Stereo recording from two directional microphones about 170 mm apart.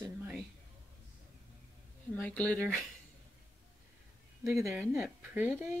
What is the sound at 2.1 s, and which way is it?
Speech, 5° left (ahead or behind).